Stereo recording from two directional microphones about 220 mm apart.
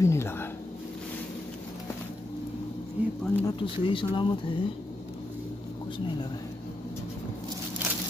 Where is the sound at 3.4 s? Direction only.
20° left (ahead or behind).